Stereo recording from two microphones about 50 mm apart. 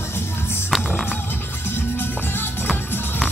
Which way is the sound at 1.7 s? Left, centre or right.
Left.